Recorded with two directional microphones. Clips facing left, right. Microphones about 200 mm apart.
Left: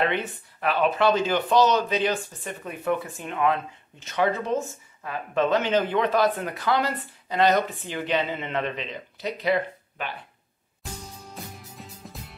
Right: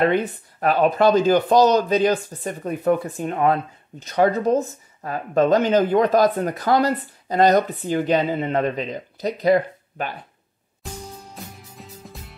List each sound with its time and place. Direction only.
0.0 s speech: 40° right (ahead or behind)
11.3 s music: centre (ahead or behind)